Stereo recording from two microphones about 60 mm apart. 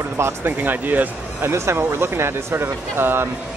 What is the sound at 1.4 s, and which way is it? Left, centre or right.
Speech, right.